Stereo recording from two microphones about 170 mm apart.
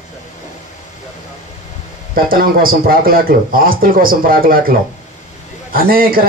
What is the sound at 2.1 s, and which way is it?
A man's voice, 55° right (ahead or behind).